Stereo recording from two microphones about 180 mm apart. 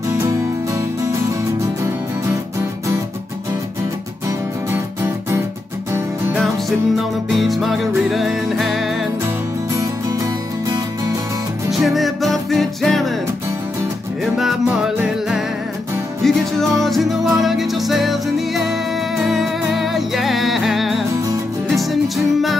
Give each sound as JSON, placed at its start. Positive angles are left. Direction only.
{"t": 4.7, "sound": "music", "side_deg": -15}
{"t": 7.0, "sound": "music", "side_deg": 0}
{"t": 11.7, "sound": "music", "side_deg": 0}
{"t": 14.2, "sound": "music", "side_deg": 0}